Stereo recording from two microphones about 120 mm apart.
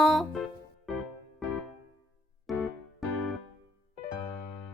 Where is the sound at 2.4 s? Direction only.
Centre (ahead or behind).